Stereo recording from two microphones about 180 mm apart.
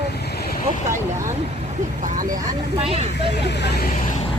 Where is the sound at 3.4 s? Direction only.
65° left (ahead or behind).